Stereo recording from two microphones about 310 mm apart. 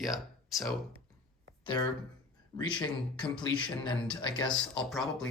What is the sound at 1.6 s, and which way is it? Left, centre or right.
Speech, centre.